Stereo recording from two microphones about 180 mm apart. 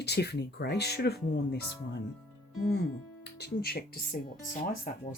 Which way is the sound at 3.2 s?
60° left (ahead or behind).